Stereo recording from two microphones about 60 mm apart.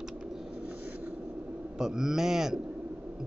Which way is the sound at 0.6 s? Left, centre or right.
Right.